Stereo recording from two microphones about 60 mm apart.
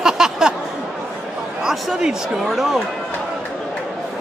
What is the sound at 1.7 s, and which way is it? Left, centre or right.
Speech, centre.